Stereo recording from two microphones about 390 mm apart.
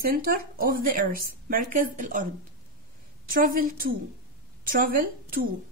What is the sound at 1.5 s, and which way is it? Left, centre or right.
Speech, right.